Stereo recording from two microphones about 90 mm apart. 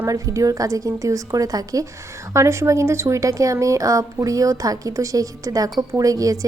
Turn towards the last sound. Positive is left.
turn(degrees=-40)  # may be behind; listen again after turning